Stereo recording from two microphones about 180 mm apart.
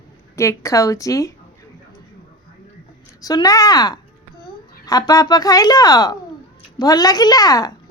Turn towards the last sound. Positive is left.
turn(degrees=20)  # may be behind; listen again after turning